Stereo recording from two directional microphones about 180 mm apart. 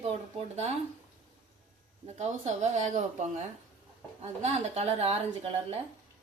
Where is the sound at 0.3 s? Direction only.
35° right (ahead or behind).